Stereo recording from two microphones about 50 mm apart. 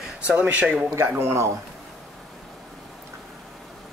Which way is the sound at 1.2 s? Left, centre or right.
Right.